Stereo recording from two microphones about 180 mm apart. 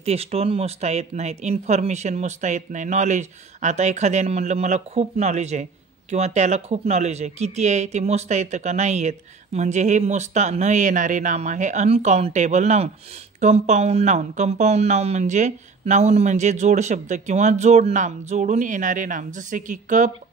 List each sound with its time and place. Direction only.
0.0 s speech: 35° right (ahead or behind)